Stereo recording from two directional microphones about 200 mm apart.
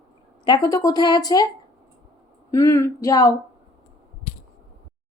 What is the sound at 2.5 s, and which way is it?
Speech, 15° left (ahead or behind).